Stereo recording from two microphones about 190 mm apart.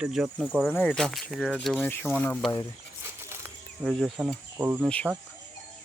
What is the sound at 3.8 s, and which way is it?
Speech, centre (ahead or behind).